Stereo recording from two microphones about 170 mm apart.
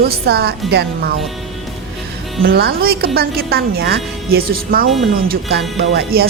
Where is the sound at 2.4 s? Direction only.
65° right (ahead or behind).